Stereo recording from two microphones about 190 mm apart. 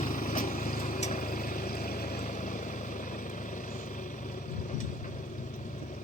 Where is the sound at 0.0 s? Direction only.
45° left (ahead or behind).